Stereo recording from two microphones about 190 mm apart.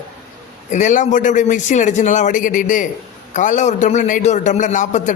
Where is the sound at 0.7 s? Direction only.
40° left (ahead or behind).